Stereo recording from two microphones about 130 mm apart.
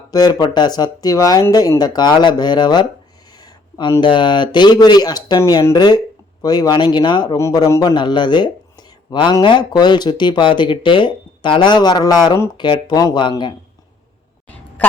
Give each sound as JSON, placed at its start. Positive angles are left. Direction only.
{"t": 0.1, "sound": "speech", "side_deg": 30}
{"t": 4.0, "sound": "speech", "side_deg": 35}
{"t": 7.3, "sound": "speech", "side_deg": 25}
{"t": 14.8, "sound": "a woman's voice", "side_deg": 10}